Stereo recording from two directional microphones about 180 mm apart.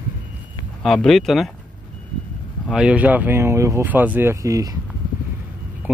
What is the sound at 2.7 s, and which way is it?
Speech, 5° right (ahead or behind).